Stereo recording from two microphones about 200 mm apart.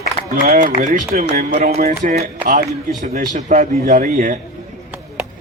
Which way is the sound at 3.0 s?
35° right (ahead or behind).